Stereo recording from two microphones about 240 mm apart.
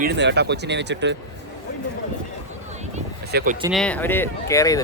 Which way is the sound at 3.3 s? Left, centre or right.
Right.